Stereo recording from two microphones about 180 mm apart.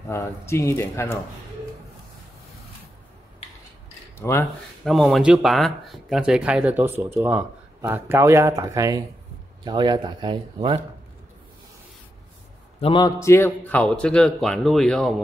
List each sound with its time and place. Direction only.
0.1 s speech: 15° left (ahead or behind)
4.2 s speech: 15° left (ahead or behind)
4.8 s speech: centre (ahead or behind); by 10.8 s 25° right (ahead or behind)
12.8 s a man's voice: 25° left (ahead or behind)
13.2 s speech: 15° left (ahead or behind)